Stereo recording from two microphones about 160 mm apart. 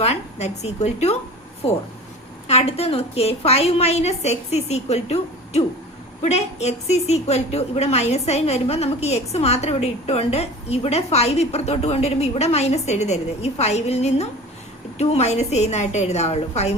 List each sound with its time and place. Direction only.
0.0 s a woman's voice: 40° left (ahead or behind)